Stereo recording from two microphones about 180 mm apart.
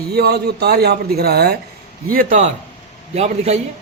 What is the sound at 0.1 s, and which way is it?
A man's voice, 65° right (ahead or behind).